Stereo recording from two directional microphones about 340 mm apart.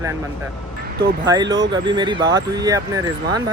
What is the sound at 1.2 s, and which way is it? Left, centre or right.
Speech, centre.